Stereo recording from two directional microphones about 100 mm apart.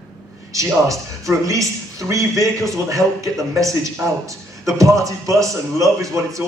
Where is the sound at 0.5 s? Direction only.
35° right (ahead or behind).